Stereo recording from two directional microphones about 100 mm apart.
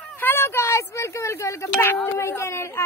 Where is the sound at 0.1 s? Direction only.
20° left (ahead or behind).